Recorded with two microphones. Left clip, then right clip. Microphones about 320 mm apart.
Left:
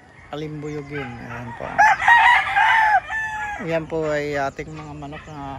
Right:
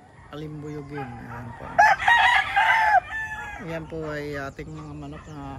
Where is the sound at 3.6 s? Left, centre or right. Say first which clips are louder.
Left 9 dB; centre.